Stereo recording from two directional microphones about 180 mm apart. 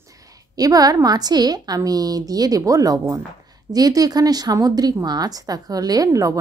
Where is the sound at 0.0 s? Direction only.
20° right (ahead or behind).